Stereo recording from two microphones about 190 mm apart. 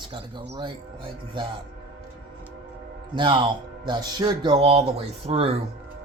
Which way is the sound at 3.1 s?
25° right (ahead or behind).